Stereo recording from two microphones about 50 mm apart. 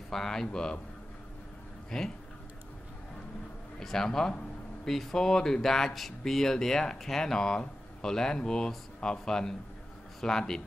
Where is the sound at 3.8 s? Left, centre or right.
Centre.